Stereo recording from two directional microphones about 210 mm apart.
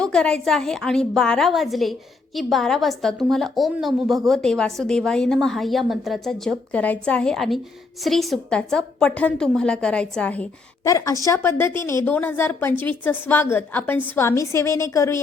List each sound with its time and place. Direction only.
0.0 s a woman's voice: 5° left (ahead or behind)